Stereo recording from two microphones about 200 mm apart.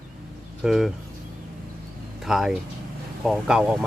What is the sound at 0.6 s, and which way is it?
Speech, centre (ahead or behind).